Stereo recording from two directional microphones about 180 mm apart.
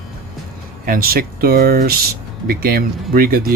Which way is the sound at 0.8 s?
55° right (ahead or behind).